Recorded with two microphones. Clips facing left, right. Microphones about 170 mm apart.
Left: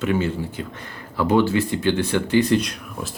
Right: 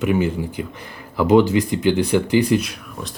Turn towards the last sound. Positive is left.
turn(degrees=-5)  # may be behind; listen again after turning